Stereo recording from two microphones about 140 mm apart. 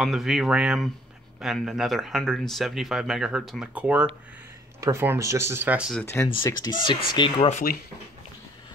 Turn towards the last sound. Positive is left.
turn(degrees=65)  # may be behind; listen again after turning